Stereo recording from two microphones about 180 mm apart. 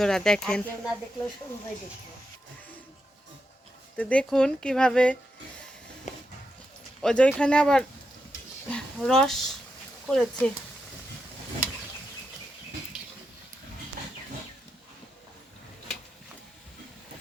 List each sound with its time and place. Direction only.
0.0 s speech: 5° left (ahead or behind)
3.9 s speech: 5° left (ahead or behind)
6.1 s a sound: 40° left (ahead or behind)
7.0 s speech: 5° left (ahead or behind)